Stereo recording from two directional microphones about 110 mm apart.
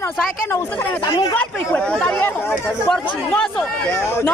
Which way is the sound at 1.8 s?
10° left (ahead or behind).